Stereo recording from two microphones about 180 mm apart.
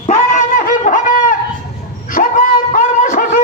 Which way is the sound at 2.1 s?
50° left (ahead or behind).